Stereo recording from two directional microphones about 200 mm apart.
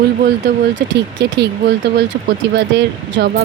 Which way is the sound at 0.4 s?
60° right (ahead or behind).